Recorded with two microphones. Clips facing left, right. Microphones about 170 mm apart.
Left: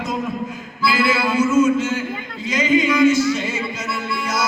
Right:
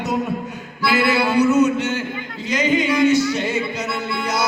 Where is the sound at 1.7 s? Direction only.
65° right (ahead or behind).